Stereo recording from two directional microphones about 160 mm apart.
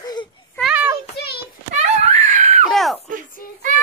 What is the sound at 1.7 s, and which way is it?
Wail, 45° right (ahead or behind).